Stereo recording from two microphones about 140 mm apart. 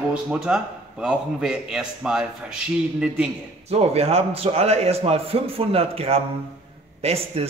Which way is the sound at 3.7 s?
45° right (ahead or behind).